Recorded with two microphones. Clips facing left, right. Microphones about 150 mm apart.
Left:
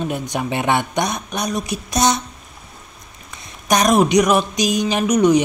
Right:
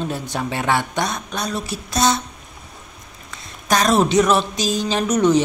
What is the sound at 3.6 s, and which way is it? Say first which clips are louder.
Speech: left 2 dB; 15° left (ahead or behind).